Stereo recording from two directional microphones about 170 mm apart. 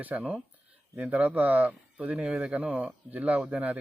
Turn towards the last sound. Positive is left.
turn(degrees=-10)  # may be behind; listen again after turning